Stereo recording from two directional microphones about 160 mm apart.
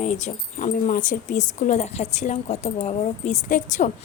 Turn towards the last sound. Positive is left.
turn(degrees=55)  # may be behind; listen again after turning